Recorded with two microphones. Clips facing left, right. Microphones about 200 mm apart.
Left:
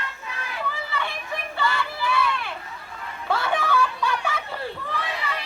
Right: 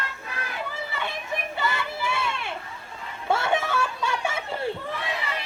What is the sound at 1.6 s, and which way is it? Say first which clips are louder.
Crowd: left 4 dB; 20° right (ahead or behind).